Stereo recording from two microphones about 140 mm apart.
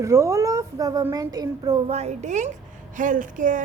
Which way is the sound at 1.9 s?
50° right (ahead or behind).